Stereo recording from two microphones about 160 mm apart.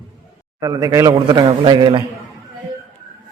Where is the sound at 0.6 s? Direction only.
25° right (ahead or behind).